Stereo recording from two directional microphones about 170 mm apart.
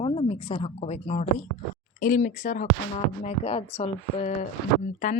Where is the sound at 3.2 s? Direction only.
40° left (ahead or behind).